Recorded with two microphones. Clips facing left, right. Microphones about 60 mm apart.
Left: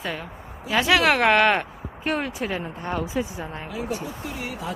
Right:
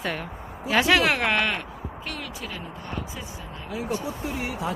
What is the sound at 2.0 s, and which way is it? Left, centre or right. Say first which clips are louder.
Speech: left 11 dB; left.